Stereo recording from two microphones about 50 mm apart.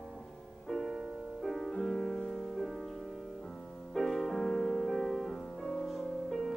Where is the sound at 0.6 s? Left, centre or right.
Centre.